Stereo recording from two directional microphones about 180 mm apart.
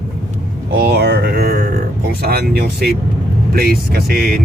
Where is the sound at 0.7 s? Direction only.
60° right (ahead or behind).